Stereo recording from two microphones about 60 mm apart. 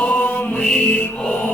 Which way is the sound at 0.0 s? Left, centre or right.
Left.